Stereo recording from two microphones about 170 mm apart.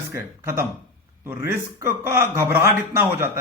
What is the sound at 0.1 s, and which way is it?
A man's voice, 15° right (ahead or behind).